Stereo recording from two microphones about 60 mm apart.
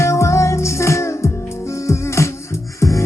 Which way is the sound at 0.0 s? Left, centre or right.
Left.